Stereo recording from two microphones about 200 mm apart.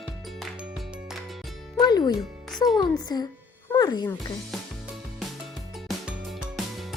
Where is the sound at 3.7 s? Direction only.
20° left (ahead or behind).